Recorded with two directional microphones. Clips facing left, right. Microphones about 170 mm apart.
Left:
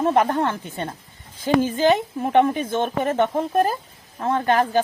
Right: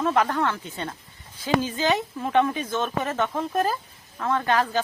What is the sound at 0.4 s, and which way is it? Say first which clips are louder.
A woman's voice: left 2 dB; 50° left (ahead or behind).